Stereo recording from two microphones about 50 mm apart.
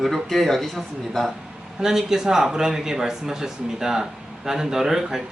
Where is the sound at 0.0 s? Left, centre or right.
Centre.